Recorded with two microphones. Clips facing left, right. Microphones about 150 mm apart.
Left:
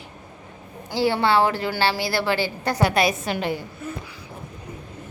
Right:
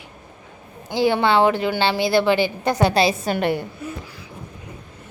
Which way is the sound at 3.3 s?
60° right (ahead or behind).